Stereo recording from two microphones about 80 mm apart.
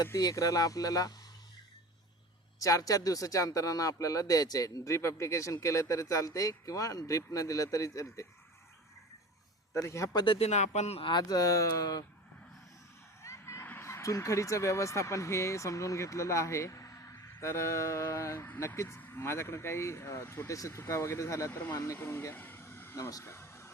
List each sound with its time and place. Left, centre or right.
0.2 s speech: left
2.6 s speech: left
9.7 s speech: left
11.0 s speech: left
13.2 s a sound: left
13.7 s speech: left
18.9 s speech: left
21.9 s a sound: left
23.0 s speech: left
23.2 s a sound: left